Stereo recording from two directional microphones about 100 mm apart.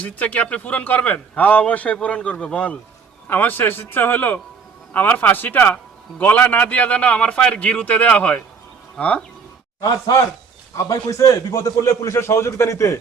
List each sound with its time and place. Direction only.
0.0 s a man's voice: 15° left (ahead or behind)
10.7 s a man's voice: 30° left (ahead or behind)